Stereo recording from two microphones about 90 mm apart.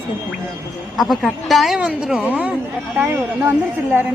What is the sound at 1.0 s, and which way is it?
Speech, centre (ahead or behind).